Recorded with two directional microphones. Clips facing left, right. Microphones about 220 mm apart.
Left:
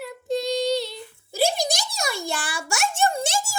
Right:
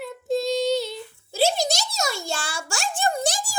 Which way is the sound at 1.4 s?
50° left (ahead or behind).